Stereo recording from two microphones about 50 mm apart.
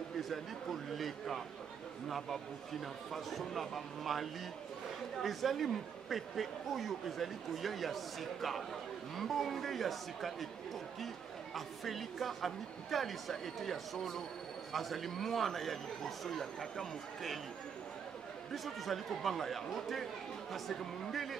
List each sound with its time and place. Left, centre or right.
0.2 s speech: centre
11.5 s speech: centre
18.5 s speech: centre